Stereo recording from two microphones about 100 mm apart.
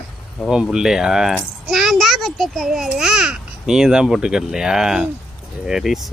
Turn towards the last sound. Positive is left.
turn(degrees=0)  # may be behind; listen again after turning